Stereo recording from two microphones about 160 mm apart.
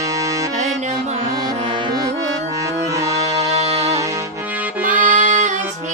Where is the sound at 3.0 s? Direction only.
20° right (ahead or behind).